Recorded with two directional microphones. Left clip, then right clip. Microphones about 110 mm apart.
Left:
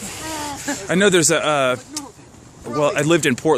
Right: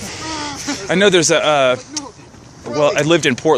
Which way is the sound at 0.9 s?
90° left.